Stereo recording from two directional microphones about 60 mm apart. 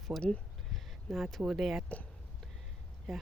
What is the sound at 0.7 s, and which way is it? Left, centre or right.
Speech, centre.